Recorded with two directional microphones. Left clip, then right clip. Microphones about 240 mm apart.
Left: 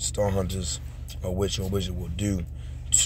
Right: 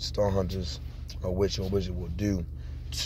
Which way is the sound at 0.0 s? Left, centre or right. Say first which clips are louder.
Left 1 dB; centre.